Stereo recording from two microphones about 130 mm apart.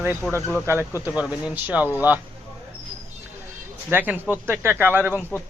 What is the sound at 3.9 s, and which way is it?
Speech, 15° right (ahead or behind).